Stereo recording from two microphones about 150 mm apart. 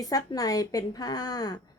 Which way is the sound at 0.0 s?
25° left (ahead or behind).